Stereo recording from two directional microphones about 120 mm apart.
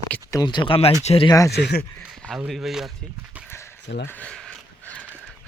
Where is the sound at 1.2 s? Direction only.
30° left (ahead or behind).